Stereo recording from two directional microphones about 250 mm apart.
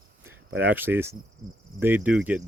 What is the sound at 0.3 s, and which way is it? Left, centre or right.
Speech, centre.